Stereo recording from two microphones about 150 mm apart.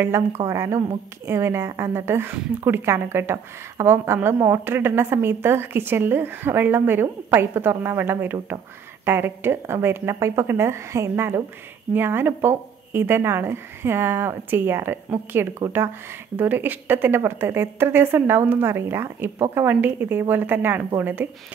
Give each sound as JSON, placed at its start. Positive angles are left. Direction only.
{"t": 0.0, "sound": "a woman's voice", "side_deg": -15}